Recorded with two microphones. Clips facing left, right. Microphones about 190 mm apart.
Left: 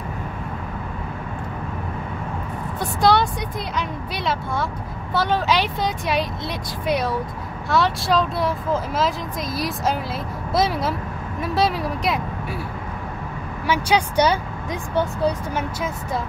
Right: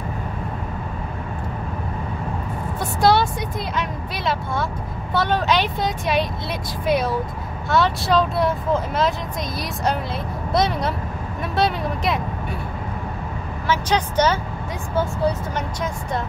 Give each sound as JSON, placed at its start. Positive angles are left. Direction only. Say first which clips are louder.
{"t": 2.8, "sound": "a sound", "louder": "even", "side_deg": 0}
{"t": 5.1, "sound": "speech", "louder": "even", "side_deg": 0}
{"t": 10.5, "sound": "speech", "louder": "even", "side_deg": 0}
{"t": 13.7, "sound": "speech", "louder": "left 1 dB", "side_deg": 10}
{"t": 15.5, "sound": "speech", "louder": "even", "side_deg": 5}